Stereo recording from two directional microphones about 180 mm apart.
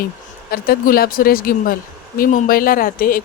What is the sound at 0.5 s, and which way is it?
Speech, 55° left (ahead or behind).